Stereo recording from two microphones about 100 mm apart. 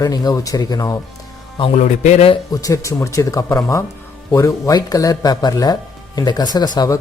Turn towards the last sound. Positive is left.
turn(degrees=45)  # may be behind; listen again after turning